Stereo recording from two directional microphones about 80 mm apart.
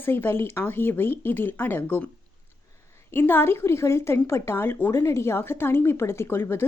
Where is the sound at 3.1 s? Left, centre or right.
Left.